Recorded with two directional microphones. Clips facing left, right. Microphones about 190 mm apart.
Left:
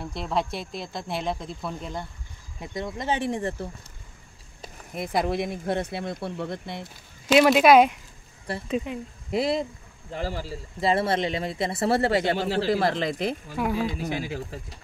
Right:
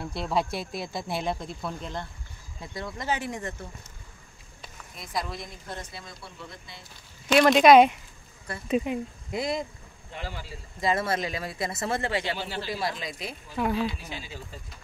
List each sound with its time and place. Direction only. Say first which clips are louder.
0.1 s speech: even; centre (ahead or behind)
2.6 s speech: left 4 dB; 20° left (ahead or behind)
4.9 s speech: left 9 dB; 60° left (ahead or behind)
7.4 s speech: right 2 dB; 5° left (ahead or behind)
8.6 s speech: right 3 dB; 10° right (ahead or behind)
9.3 s speech: left 5 dB; 30° left (ahead or behind)
10.1 s speech: left 7 dB; 40° left (ahead or behind)
12.5 s speech: left 8 dB; 60° left (ahead or behind)
13.6 s speech: even; 10° left (ahead or behind)